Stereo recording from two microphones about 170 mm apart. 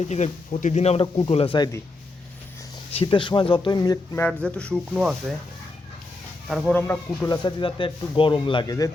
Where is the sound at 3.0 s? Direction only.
30° left (ahead or behind).